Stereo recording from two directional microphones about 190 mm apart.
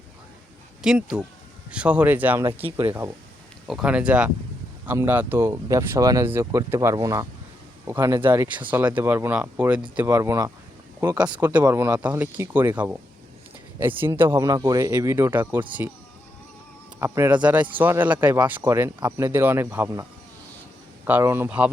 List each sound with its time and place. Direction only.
0.8 s speech: 5° right (ahead or behind)
2.6 s speech: 30° right (ahead or behind)
3.7 s speech: 5° right (ahead or behind)
17.0 s speech: 10° right (ahead or behind)
21.1 s speech: 10° right (ahead or behind)